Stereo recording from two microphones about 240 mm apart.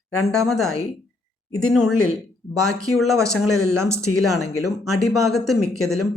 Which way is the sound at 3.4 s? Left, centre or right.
Left.